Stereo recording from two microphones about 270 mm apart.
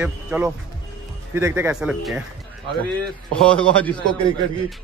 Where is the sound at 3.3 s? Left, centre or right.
Centre.